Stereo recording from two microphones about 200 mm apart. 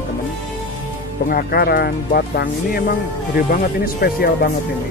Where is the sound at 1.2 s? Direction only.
50° left (ahead or behind).